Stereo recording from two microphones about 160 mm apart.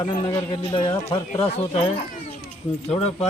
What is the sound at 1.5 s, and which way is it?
Speech, 40° left (ahead or behind).